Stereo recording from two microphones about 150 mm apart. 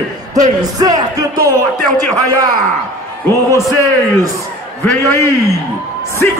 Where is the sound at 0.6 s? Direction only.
25° right (ahead or behind).